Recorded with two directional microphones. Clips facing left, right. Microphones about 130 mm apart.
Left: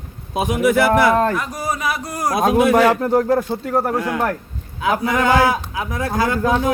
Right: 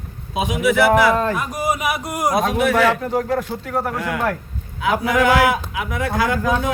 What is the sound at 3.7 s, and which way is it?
Speech, 30° left (ahead or behind).